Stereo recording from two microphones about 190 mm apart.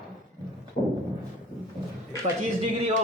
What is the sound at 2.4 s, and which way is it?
Speech, 40° right (ahead or behind).